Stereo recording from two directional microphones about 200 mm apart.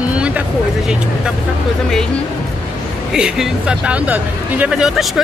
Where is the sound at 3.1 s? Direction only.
5° right (ahead or behind).